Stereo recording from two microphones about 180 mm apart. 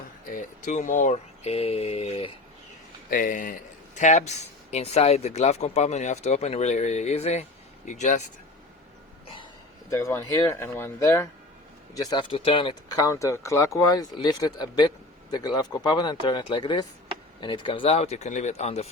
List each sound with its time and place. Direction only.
0.3 s speech: 45° left (ahead or behind)
3.1 s speech: 50° left (ahead or behind)
9.9 s speech: 15° left (ahead or behind)
11.9 s speech: 25° left (ahead or behind)
13.0 s speech: 15° left (ahead or behind); by 18.9 s 35° left (ahead or behind)